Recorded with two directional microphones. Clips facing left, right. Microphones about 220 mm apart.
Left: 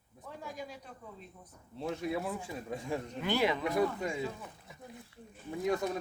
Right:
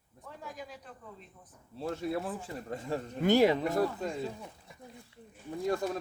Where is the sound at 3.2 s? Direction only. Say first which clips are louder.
Right 7 dB; 45° right (ahead or behind).